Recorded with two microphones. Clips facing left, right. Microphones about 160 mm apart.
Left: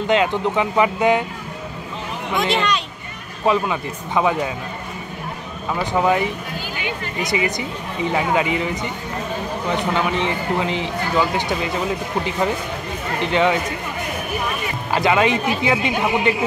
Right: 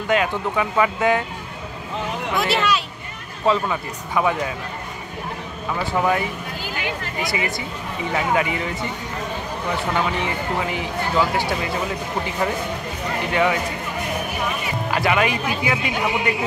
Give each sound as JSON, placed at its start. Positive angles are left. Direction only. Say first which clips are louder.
{"t": 0.1, "sound": "speech", "louder": "left 2 dB", "side_deg": 25}
{"t": 2.5, "sound": "speech", "louder": "right 1 dB", "side_deg": -5}
{"t": 3.4, "sound": "speech", "louder": "left 1 dB", "side_deg": 20}
{"t": 5.9, "sound": "speech", "louder": "left 3 dB", "side_deg": 20}
{"t": 7.2, "sound": "speech", "louder": "left 5 dB", "side_deg": 20}
{"t": 13.3, "sound": "speech", "louder": "left 2 dB", "side_deg": 25}
{"t": 15.0, "sound": "speech", "louder": "left 4 dB", "side_deg": 25}